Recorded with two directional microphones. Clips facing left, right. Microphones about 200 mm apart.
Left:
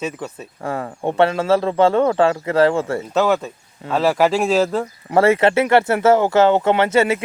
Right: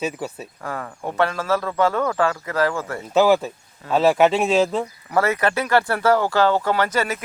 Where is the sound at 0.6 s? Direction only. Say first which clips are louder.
Left 6 dB; 25° left (ahead or behind).